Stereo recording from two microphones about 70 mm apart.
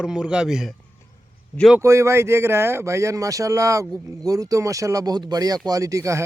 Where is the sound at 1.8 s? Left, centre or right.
Right.